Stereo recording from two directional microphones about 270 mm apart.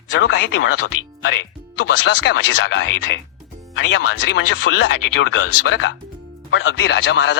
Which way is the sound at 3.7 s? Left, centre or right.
Left.